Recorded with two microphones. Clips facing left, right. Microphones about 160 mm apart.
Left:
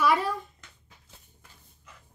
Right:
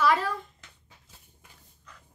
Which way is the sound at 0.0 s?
15° left (ahead or behind).